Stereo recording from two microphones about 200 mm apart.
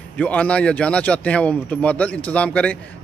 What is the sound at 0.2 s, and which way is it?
A man's voice, 5° left (ahead or behind).